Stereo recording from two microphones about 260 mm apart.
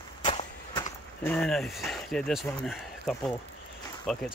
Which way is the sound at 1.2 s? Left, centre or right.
Centre.